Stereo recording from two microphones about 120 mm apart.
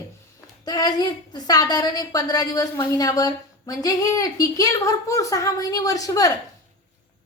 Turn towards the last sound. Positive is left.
turn(degrees=30)  # may be behind; listen again after turning